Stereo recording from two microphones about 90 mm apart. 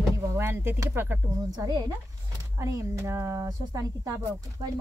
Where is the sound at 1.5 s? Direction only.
45° right (ahead or behind).